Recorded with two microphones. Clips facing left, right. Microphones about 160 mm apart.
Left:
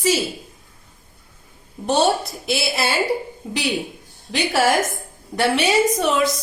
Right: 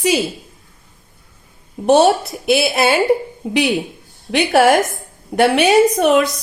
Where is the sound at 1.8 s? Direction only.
65° right (ahead or behind).